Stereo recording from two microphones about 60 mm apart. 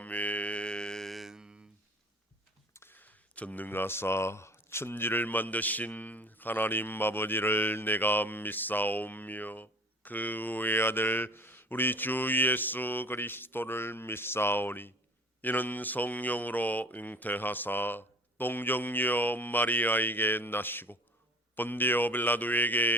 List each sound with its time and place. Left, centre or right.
0.0 s mantra: left; by 1.5 s centre
2.9 s speech: left